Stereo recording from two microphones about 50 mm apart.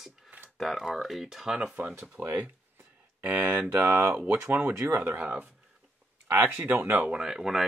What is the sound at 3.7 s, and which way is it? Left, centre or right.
Speech, right.